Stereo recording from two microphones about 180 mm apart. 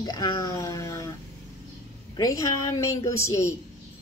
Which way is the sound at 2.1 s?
20° left (ahead or behind).